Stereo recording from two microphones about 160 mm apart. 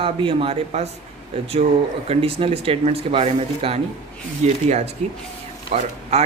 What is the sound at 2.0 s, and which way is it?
Speech, 40° right (ahead or behind).